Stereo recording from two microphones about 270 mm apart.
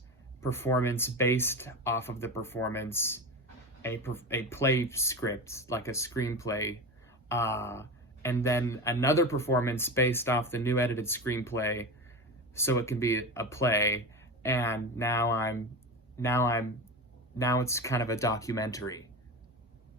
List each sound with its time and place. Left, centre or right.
0.4 s speech: centre